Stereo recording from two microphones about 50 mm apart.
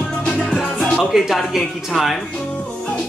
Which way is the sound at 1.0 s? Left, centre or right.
Centre.